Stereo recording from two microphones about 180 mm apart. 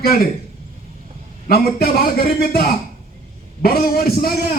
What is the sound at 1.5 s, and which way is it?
Speech, 55° left (ahead or behind).